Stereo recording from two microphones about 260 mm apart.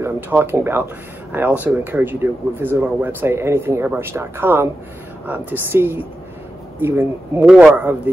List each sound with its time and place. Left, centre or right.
0.0 s speech: centre